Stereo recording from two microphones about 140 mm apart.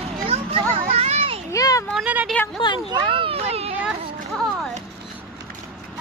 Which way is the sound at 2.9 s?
40° right (ahead or behind).